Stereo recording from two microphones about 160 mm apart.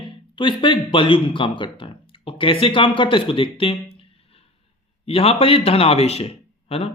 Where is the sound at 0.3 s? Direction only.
30° left (ahead or behind).